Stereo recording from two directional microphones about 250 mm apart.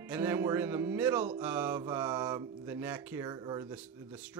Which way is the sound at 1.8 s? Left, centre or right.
Centre.